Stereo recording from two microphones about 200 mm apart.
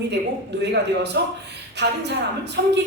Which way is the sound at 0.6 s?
60° right (ahead or behind).